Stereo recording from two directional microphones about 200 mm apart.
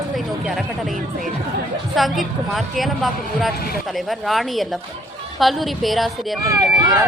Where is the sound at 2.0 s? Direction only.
Centre (ahead or behind).